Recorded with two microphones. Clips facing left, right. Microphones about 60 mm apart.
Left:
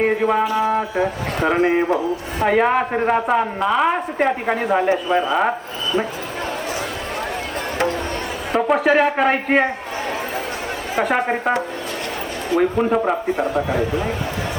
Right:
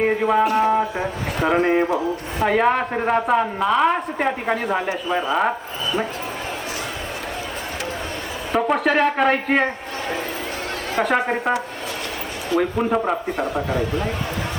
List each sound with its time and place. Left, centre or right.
0.0 s speech: centre
0.4 s speech: right
0.7 s speech: centre
1.4 s a woman's voice: centre
8.5 s a woman's voice: centre
11.0 s a woman's voice: centre
12.5 s a woman's voice: centre